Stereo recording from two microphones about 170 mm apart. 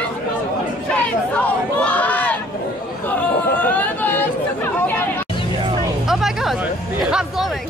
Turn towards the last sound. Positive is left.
turn(degrees=0)  # may be behind; listen again after turning